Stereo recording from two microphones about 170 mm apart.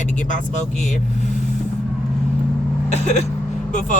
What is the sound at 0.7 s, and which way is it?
Speech, centre (ahead or behind).